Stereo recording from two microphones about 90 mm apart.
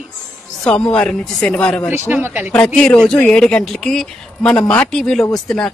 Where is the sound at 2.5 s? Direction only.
10° left (ahead or behind).